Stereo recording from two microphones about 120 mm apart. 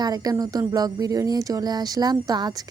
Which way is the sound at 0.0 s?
30° right (ahead or behind).